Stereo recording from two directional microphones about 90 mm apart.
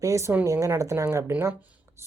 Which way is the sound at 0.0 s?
35° right (ahead or behind).